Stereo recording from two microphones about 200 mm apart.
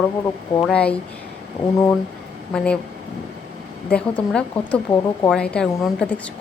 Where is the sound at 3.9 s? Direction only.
5° left (ahead or behind).